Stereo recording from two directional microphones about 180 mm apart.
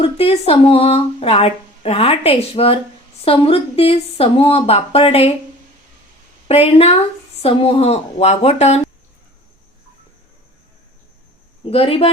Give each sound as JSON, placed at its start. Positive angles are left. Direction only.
{"t": 0.0, "sound": "speech", "side_deg": 35}
{"t": 6.5, "sound": "speech", "side_deg": 35}
{"t": 11.6, "sound": "speech", "side_deg": 30}